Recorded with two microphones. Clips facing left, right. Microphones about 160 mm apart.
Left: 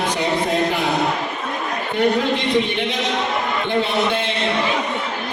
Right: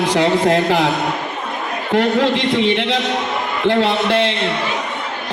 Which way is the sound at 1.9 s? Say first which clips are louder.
Right 3 dB; 90° right.